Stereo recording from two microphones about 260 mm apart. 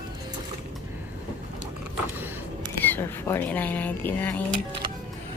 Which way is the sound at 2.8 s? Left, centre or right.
Centre.